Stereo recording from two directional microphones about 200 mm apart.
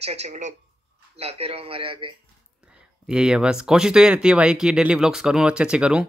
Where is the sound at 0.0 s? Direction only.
30° right (ahead or behind).